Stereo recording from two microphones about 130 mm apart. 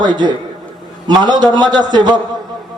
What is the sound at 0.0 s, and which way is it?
Speech, 35° right (ahead or behind).